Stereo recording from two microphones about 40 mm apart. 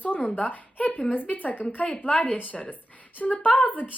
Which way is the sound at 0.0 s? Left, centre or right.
Left.